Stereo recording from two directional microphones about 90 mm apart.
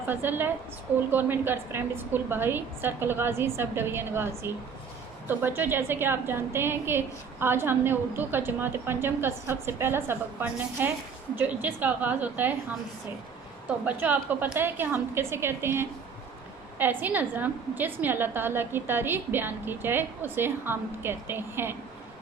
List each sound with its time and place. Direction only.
0.1 s a woman's voice: 20° right (ahead or behind)
13.8 s a woman's voice: 20° right (ahead or behind)